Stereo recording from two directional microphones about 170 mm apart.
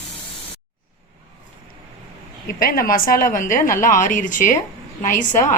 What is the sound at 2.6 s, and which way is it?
A woman's voice, 55° left (ahead or behind).